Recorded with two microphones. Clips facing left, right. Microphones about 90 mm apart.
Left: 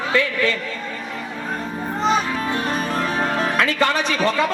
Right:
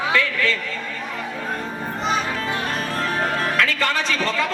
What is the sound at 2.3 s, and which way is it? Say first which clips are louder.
Music: left 2 dB; 20° left (ahead or behind).